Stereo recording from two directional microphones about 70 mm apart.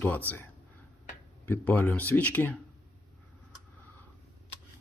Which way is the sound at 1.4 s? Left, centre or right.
Left.